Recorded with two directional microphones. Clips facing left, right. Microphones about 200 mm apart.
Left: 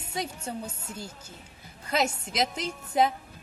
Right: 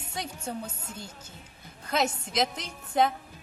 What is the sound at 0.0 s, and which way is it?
A woman's voice, 10° left (ahead or behind).